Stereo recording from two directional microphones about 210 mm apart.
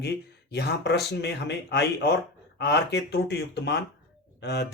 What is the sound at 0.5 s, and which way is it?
Speech, 50° left (ahead or behind).